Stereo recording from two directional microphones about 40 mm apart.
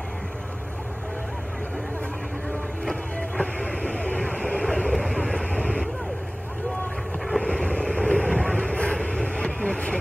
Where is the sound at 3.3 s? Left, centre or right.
Left.